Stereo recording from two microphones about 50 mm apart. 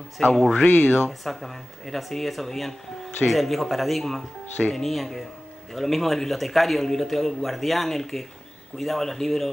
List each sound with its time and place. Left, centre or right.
0.2 s speech: centre
0.7 s speech: left
1.0 s a man's voice: centre